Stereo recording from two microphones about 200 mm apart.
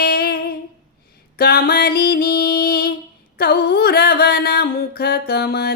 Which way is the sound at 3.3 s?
50° left (ahead or behind).